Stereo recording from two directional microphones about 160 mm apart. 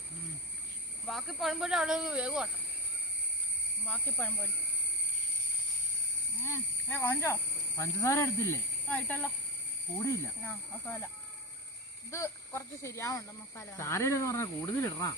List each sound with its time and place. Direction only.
1.0 s speech: centre (ahead or behind)
3.8 s speech: 10° left (ahead or behind)
6.3 s speech: 15° left (ahead or behind)
12.1 s speech: 20° left (ahead or behind)